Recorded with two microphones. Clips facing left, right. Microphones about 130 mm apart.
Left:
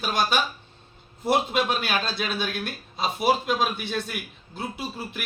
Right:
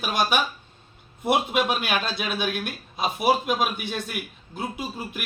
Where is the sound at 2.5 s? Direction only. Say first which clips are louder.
Right 2 dB; 55° right (ahead or behind).